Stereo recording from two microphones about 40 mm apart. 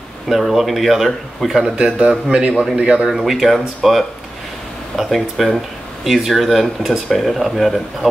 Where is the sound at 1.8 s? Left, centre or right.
Right.